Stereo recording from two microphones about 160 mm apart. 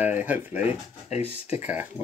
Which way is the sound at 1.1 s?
40° left (ahead or behind).